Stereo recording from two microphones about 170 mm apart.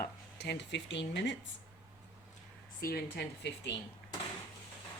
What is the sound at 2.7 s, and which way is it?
Speech, 65° left (ahead or behind).